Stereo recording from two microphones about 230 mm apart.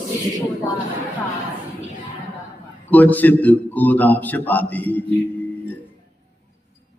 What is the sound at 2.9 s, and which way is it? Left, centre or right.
A man's voice, centre.